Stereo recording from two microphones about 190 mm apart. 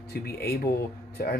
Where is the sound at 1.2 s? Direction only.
50° left (ahead or behind).